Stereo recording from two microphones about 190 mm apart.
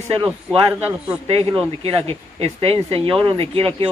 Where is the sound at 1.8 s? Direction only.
30° right (ahead or behind).